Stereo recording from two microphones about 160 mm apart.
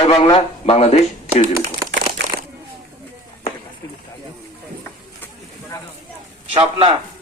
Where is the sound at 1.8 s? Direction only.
70° right (ahead or behind).